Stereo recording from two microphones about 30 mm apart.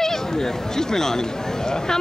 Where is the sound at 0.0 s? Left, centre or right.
Centre.